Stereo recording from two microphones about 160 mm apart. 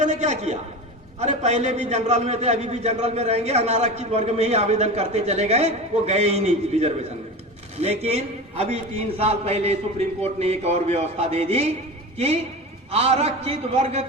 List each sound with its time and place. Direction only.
0.0 s a man's voice: 45° right (ahead or behind)